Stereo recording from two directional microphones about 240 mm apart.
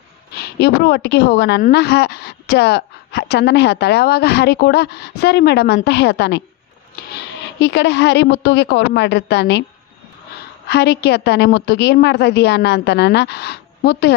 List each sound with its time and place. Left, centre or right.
0.3 s a woman's voice: left
7.6 s a woman's voice: left
10.7 s a woman's voice: left